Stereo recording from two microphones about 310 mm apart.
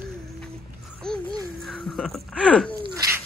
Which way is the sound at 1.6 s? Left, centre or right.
Centre.